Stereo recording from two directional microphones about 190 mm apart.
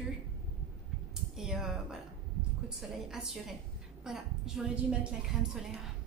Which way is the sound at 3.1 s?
5° right (ahead or behind).